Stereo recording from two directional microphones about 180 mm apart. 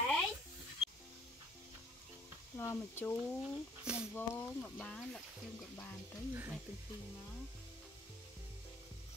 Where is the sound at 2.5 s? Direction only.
15° left (ahead or behind).